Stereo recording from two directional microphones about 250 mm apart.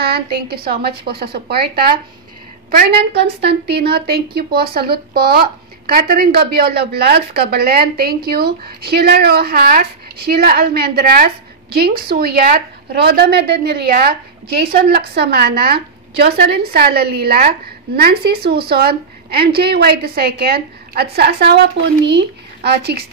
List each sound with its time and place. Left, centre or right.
0.0 s a woman's voice: right